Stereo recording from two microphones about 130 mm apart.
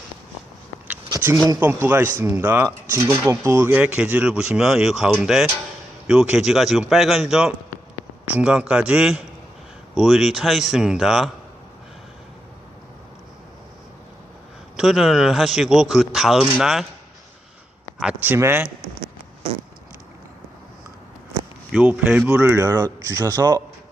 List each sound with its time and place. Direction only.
1.5 s speech: 15° right (ahead or behind)
14.8 s speech: 5° right (ahead or behind)
18.0 s speech: 15° right (ahead or behind)
21.7 s speech: 10° right (ahead or behind)
22.6 s speech: 30° right (ahead or behind)